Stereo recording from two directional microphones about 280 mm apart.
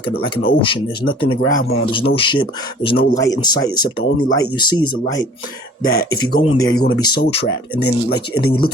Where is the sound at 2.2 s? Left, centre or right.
Centre.